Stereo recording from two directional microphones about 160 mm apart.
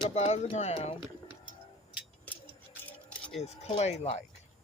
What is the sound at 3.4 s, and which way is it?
Speech, 45° left (ahead or behind).